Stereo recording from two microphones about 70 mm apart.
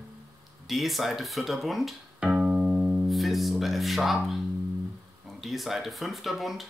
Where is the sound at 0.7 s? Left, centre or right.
Centre.